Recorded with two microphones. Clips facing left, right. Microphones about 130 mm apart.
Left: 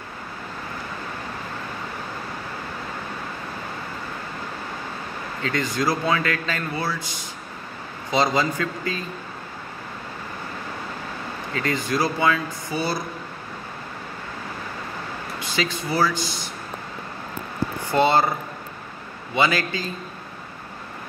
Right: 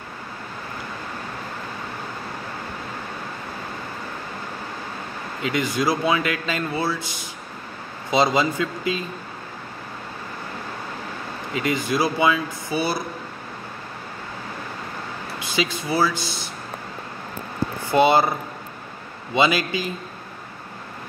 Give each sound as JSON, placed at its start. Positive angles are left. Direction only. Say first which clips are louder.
{"t": 5.4, "sound": "speech", "louder": "right 2 dB", "side_deg": -15}
{"t": 8.1, "sound": "speech", "louder": "right 2 dB", "side_deg": -20}
{"t": 11.5, "sound": "speech", "louder": "right 2 dB", "side_deg": -15}
{"t": 15.5, "sound": "speech", "louder": "right 2 dB", "side_deg": -15}
{"t": 17.9, "sound": "speech", "louder": "right 2 dB", "side_deg": -15}
{"t": 19.3, "sound": "speech", "louder": "right 2 dB", "side_deg": -15}